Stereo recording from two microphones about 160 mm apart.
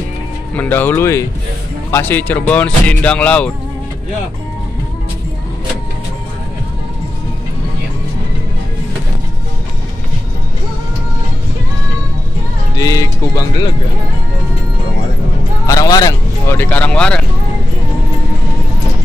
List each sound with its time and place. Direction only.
0.6 s speech: 10° left (ahead or behind)
12.7 s speech: 20° left (ahead or behind)
15.6 s music: 20° left (ahead or behind)
16.5 s speech: 10° left (ahead or behind)